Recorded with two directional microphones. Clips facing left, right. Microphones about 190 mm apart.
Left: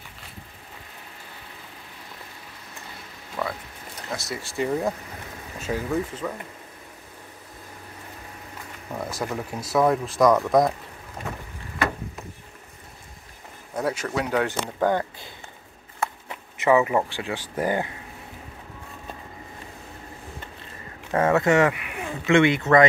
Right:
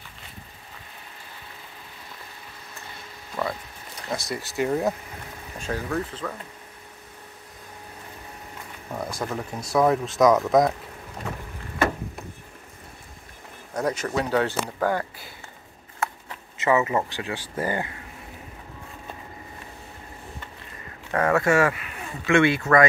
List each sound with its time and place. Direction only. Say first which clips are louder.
4.2 s speech: even; centre (ahead or behind)
8.9 s speech: even; 5° left (ahead or behind)
13.7 s speech: right 1 dB; 5° left (ahead or behind)
21.1 s speech: left 1 dB; 20° left (ahead or behind)